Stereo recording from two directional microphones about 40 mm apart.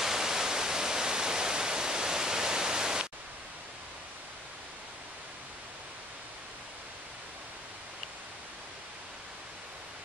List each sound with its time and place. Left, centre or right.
0.0 s waterfall: centre